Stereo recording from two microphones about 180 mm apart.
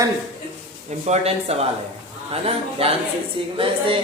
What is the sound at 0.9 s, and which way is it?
Speech, 40° right (ahead or behind).